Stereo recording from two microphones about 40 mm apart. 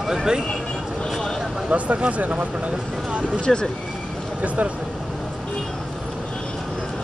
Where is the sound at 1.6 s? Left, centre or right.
Right.